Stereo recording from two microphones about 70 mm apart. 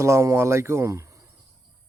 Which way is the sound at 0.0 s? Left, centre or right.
Right.